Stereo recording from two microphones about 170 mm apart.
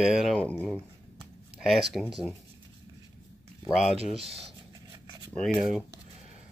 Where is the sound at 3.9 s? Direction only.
35° right (ahead or behind).